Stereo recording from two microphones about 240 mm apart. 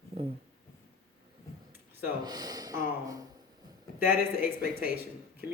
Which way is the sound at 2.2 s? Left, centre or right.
Centre.